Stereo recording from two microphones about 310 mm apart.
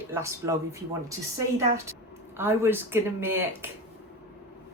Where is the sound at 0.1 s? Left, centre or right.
Centre.